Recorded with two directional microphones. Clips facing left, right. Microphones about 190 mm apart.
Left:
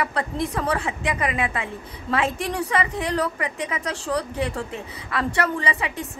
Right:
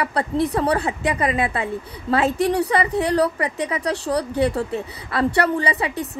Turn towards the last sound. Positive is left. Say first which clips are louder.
# right 4 dB
turn(degrees=-35)  # may be behind; listen again after turning